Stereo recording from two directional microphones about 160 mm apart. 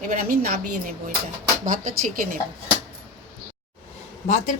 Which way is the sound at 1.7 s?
55° right (ahead or behind).